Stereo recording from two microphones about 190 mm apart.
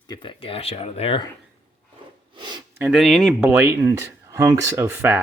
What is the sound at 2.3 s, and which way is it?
Speech, 25° right (ahead or behind).